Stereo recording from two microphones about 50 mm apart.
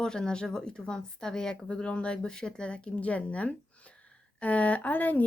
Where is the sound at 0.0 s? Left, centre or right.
Centre.